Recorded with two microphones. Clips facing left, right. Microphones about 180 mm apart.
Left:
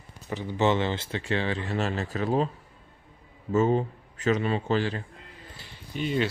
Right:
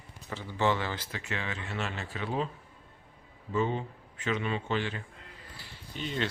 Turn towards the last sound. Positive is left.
turn(degrees=10)  # may be behind; listen again after turning